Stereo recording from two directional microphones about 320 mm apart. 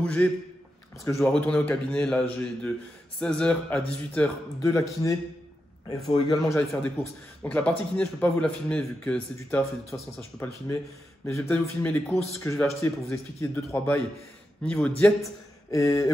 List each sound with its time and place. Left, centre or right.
0.0 s a man's voice: centre